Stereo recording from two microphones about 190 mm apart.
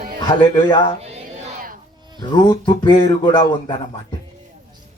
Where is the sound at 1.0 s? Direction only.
35° right (ahead or behind).